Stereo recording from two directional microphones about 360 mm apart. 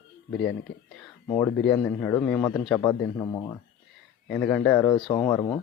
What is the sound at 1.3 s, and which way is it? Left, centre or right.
A man's voice, centre.